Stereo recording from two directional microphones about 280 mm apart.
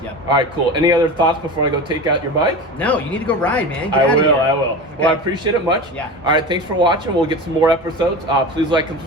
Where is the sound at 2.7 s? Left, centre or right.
Centre.